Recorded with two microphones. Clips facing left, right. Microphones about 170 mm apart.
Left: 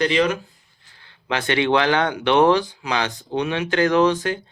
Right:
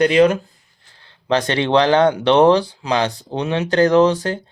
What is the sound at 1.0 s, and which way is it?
Speech, 35° right (ahead or behind).